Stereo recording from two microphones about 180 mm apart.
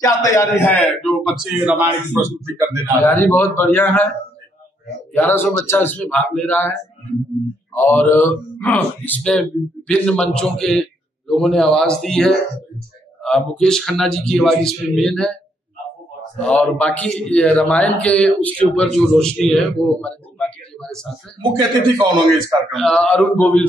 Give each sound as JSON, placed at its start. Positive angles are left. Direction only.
{"t": 0.0, "sound": "a man's voice", "side_deg": 15}
{"t": 3.0, "sound": "speech", "side_deg": 10}
{"t": 5.1, "sound": "speech", "side_deg": 10}
{"t": 7.7, "sound": "a man's voice", "side_deg": 10}
{"t": 16.3, "sound": "a man's voice", "side_deg": 5}
{"t": 21.4, "sound": "a man's voice", "side_deg": -25}
{"t": 22.7, "sound": "speech", "side_deg": 0}